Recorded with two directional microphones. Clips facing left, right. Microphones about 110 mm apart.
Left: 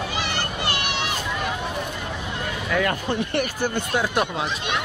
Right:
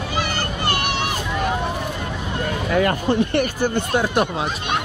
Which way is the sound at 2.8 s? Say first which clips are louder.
Right 6 dB; 45° right (ahead or behind).